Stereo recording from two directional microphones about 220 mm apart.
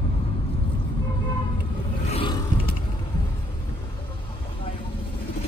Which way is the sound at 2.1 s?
25° left (ahead or behind).